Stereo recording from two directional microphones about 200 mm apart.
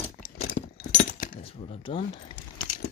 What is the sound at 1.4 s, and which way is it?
Speech, 30° left (ahead or behind).